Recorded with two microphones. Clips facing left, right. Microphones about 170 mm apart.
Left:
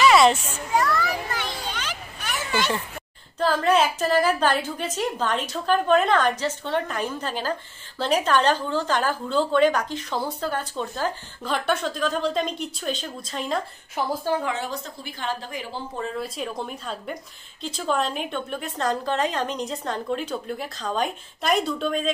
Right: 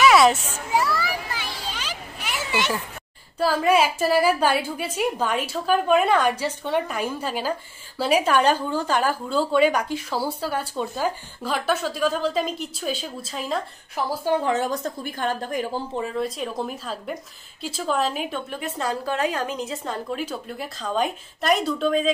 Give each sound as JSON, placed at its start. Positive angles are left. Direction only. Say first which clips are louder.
{"t": 0.0, "sound": "children playing", "louder": "right 1 dB", "side_deg": 0}
{"t": 3.3, "sound": "a woman's voice", "louder": "right 1 dB", "side_deg": -10}
{"t": 14.4, "sound": "a woman's voice", "louder": "right 5 dB", "side_deg": -45}
{"t": 16.2, "sound": "a woman's voice", "louder": "right 3 dB", "side_deg": 0}